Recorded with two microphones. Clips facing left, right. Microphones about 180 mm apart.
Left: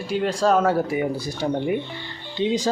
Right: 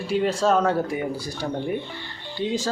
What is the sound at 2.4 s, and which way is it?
Speech, 20° left (ahead or behind).